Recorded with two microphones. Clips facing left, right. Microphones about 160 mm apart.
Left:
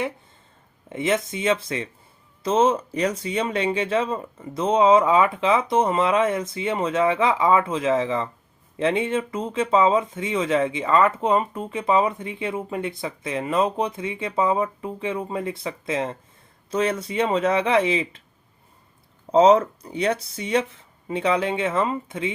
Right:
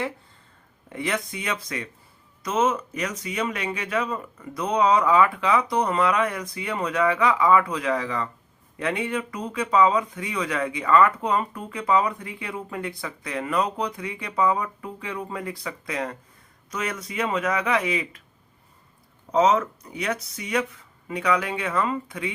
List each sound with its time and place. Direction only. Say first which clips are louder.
0.9 s speech: left 5 dB; 20° left (ahead or behind)
19.3 s speech: left 5 dB; 30° left (ahead or behind)